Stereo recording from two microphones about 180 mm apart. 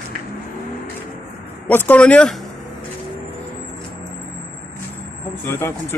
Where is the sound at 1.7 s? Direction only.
10° left (ahead or behind).